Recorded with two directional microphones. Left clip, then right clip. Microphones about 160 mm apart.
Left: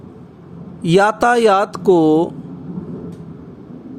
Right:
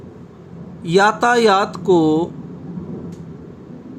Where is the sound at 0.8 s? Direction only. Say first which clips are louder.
Left 1 dB; 50° left (ahead or behind).